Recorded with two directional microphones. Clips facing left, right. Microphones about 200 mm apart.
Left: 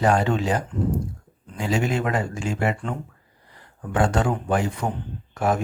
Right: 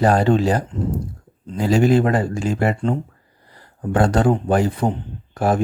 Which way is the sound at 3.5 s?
35° right (ahead or behind).